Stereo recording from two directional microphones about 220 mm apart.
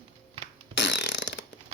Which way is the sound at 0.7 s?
50° left (ahead or behind).